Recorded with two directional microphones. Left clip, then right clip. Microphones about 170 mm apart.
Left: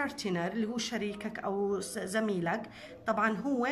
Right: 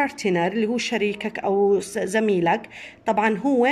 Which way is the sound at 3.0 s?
25° right (ahead or behind).